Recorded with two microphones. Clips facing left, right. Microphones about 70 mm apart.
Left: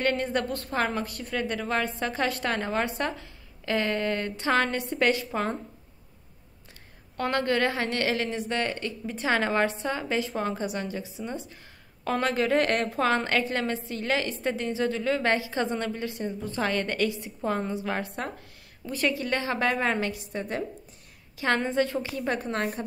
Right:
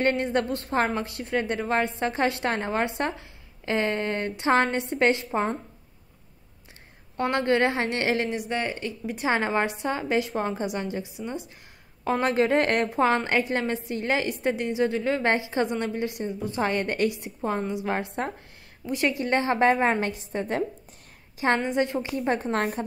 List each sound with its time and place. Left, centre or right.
0.0 s a woman's voice: right
7.2 s a woman's voice: right
21.5 s a woman's voice: centre; by 22.8 s right